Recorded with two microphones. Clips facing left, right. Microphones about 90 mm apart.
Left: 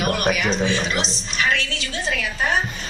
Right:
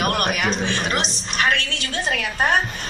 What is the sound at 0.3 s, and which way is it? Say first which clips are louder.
A woman's voice: left 1 dB; 55° right (ahead or behind).